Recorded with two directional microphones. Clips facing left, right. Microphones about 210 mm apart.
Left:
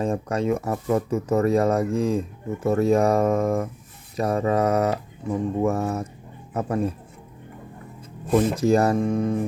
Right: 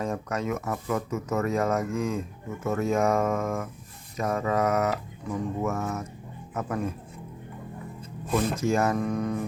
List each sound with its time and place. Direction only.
0.0 s speech: 30° left (ahead or behind)
8.4 s speech: 35° left (ahead or behind)